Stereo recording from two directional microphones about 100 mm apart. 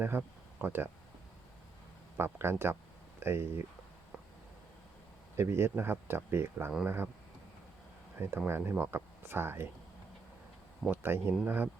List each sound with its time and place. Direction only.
0.0 s speech: 20° right (ahead or behind)
2.1 s speech: 25° right (ahead or behind)
5.4 s speech: 25° right (ahead or behind)
8.4 s speech: 25° right (ahead or behind)
10.8 s speech: 20° right (ahead or behind)